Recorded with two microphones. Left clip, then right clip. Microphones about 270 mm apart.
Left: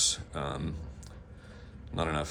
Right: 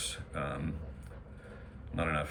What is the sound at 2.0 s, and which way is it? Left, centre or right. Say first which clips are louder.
Speech: left 1 dB; centre.